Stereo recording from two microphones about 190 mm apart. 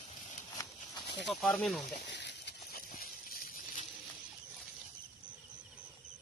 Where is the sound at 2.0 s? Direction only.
65° left (ahead or behind); by 3.8 s 50° left (ahead or behind).